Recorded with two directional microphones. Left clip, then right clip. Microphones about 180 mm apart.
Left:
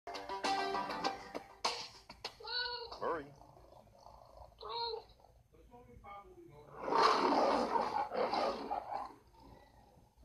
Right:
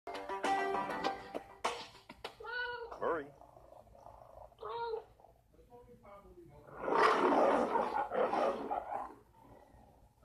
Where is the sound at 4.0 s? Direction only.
25° right (ahead or behind).